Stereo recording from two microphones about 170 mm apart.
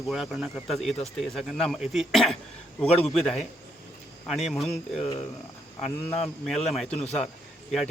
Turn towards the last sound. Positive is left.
turn(degrees=0)  # may be behind; listen again after turning